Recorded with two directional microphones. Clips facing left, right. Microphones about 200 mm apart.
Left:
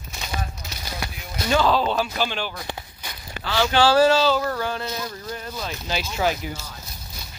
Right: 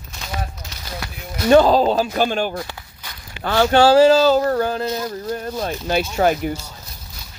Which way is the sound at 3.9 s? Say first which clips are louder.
Right 5 dB; 40° right (ahead or behind).